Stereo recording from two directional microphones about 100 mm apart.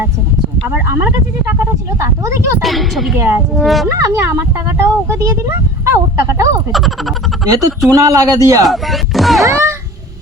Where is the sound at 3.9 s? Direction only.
30° right (ahead or behind).